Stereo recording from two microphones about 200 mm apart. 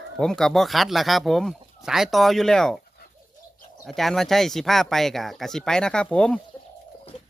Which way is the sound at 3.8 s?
Centre (ahead or behind).